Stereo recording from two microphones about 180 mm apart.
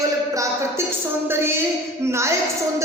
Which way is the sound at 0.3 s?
15° right (ahead or behind).